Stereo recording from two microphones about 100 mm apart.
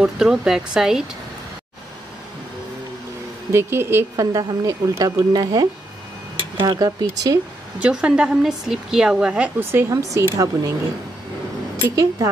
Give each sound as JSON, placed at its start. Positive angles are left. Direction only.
{"t": 0.0, "sound": "speech", "side_deg": -5}
{"t": 3.5, "sound": "speech", "side_deg": -25}
{"t": 4.2, "sound": "speech", "side_deg": -40}
{"t": 7.8, "sound": "a woman's voice", "side_deg": -10}
{"t": 11.9, "sound": "speech", "side_deg": -35}